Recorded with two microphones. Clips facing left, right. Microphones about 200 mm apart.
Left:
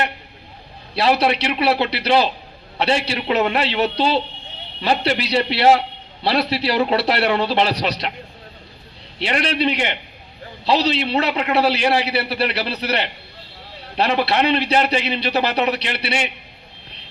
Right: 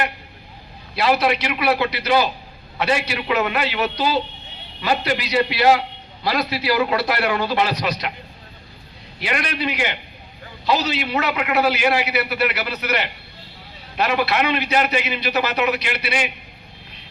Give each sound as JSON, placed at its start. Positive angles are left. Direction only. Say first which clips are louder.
{"t": 0.9, "sound": "a man's voice", "louder": "left 1 dB", "side_deg": 30}
{"t": 9.1, "sound": "a man's voice", "louder": "left 4 dB", "side_deg": 30}